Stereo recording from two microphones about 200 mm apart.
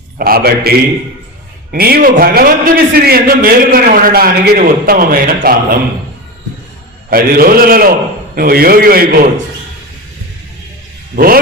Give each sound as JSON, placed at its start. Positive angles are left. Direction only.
{"t": 0.2, "sound": "a man's voice", "side_deg": -50}
{"t": 1.7, "sound": "a man's voice", "side_deg": -45}
{"t": 7.1, "sound": "a man's voice", "side_deg": -50}